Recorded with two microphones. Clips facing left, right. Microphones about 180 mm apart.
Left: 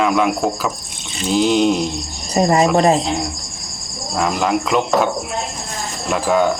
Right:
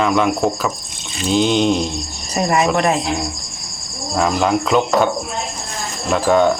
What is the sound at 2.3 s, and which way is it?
Speech, 30° left (ahead or behind).